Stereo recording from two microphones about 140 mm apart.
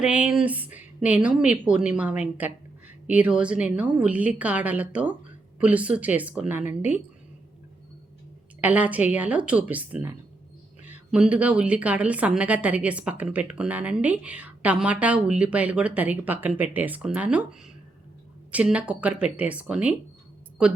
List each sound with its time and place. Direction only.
0.0 s a woman's voice: 5° right (ahead or behind)
6.6 s speech: 60° left (ahead or behind)
8.6 s a woman's voice: 10° right (ahead or behind)